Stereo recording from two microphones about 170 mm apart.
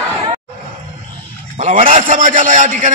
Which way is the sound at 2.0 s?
50° right (ahead or behind).